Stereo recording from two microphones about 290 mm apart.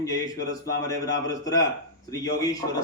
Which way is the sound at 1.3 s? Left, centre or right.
Centre.